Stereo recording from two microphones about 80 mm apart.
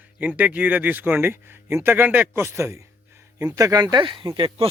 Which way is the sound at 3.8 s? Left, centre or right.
Right.